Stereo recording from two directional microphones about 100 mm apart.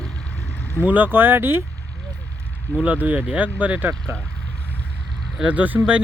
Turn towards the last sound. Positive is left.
turn(degrees=-15)  # may be behind; listen again after turning